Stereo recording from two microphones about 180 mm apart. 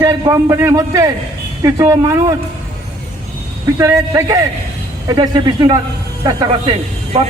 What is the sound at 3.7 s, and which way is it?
A man's voice, 15° right (ahead or behind).